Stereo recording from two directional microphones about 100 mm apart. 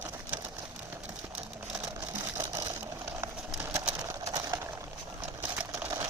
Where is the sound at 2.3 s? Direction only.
30° right (ahead or behind).